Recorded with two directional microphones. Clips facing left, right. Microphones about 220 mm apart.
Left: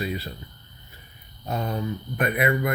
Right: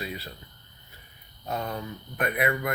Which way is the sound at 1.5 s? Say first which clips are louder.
Left 3 dB; 15° left (ahead or behind).